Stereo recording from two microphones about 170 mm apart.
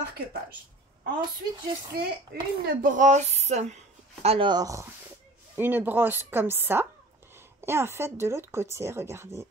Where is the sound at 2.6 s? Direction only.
50° right (ahead or behind).